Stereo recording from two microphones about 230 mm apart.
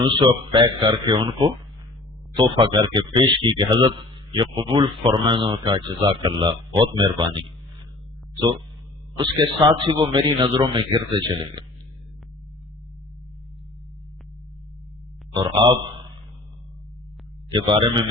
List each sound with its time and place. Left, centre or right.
0.0 s speech: right
9.1 s speech: right
17.5 s speech: right